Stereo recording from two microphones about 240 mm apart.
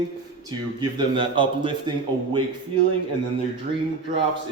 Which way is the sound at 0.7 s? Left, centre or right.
Centre.